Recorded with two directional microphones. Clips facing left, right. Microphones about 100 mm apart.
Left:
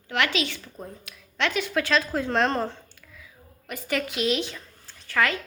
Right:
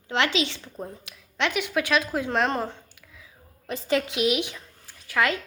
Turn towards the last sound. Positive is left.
turn(degrees=-15)  # may be behind; listen again after turning